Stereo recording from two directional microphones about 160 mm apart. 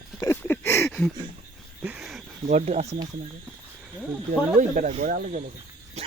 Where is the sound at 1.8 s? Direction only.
5° right (ahead or behind).